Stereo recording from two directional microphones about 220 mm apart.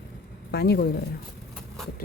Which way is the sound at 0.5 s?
45° left (ahead or behind).